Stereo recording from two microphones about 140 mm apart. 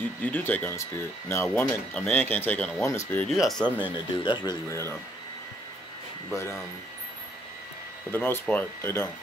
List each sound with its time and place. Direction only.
0.2 s speech: 10° left (ahead or behind)
3.3 s speech: centre (ahead or behind)
3.9 s speech: 35° left (ahead or behind)
4.6 s speech: 20° left (ahead or behind)
8.1 s speech: 15° left (ahead or behind)